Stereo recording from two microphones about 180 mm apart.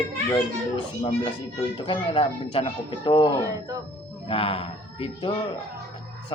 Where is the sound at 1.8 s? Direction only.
30° left (ahead or behind).